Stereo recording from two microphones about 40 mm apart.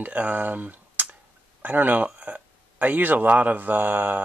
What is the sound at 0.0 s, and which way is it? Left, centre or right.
A man's voice, right.